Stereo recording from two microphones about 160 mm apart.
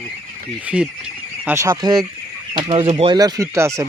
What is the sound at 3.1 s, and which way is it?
Speech, 25° right (ahead or behind).